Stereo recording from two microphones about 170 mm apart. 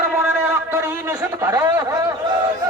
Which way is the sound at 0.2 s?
15° right (ahead or behind).